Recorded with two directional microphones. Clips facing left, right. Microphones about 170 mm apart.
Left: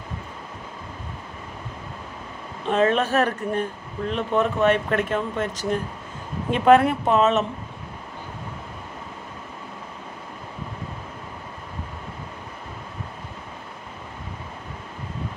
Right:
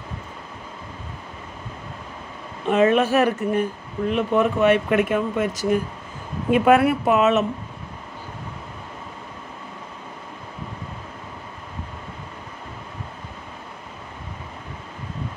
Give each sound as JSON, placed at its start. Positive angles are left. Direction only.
{"t": 2.6, "sound": "speech", "side_deg": -10}